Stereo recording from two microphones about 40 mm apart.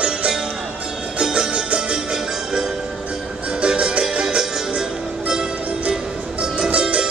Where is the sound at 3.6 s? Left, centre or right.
Right.